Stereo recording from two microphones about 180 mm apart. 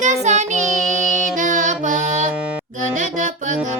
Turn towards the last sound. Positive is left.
turn(degrees=-45)  # may be behind; listen again after turning